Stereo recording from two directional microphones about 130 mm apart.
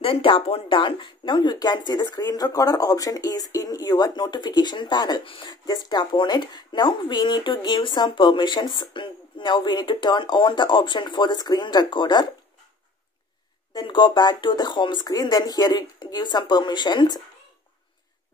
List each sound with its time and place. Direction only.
0.0 s speech: 45° left (ahead or behind)
13.7 s speech: 35° left (ahead or behind)